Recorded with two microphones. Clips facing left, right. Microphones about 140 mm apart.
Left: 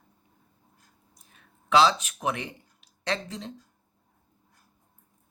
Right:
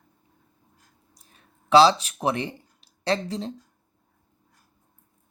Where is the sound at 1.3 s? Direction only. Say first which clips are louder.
Right 5 dB; 35° right (ahead or behind).